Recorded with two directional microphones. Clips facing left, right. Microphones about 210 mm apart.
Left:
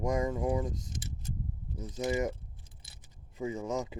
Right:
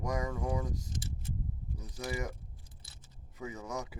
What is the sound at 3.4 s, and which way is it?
Speech, 25° left (ahead or behind).